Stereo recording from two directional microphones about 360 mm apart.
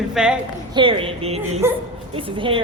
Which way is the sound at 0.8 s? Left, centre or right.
Centre.